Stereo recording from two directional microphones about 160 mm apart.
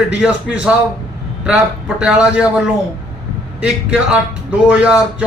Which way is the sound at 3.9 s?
5° right (ahead or behind).